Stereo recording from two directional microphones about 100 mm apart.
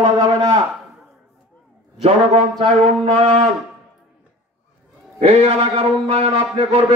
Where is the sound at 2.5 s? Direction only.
75° right (ahead or behind).